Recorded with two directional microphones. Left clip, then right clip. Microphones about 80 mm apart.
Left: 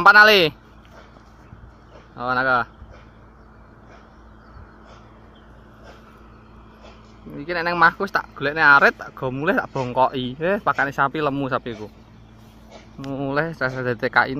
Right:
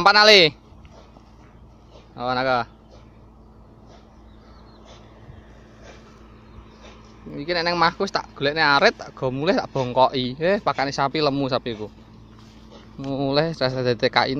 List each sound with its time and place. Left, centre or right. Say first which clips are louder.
0.0 s speech: left 1 dB; right
2.1 s speech: left 2 dB; right
7.3 s speech: left 1 dB; right; by 10.9 s centre
11.0 s speech: even; right
13.3 s speech: right 1 dB; right
13.7 s speech: left 1 dB; right